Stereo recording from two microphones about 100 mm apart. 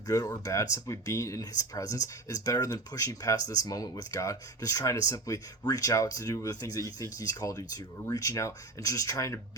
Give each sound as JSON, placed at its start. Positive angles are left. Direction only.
{"t": 0.1, "sound": "speech", "side_deg": 35}